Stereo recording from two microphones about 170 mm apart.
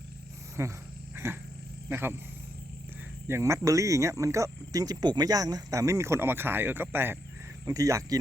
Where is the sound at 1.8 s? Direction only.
10° right (ahead or behind).